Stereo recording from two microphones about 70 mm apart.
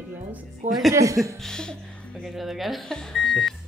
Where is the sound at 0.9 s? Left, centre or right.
Right.